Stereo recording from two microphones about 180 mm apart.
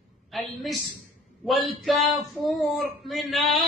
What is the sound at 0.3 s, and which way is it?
A woman's voice, centre (ahead or behind).